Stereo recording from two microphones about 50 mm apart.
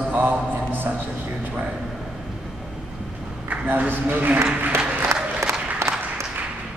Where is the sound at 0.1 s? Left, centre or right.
Right.